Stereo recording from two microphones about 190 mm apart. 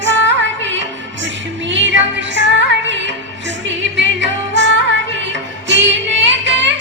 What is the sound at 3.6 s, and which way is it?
Music, 70° right (ahead or behind).